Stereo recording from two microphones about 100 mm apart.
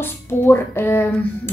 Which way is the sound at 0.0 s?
25° left (ahead or behind).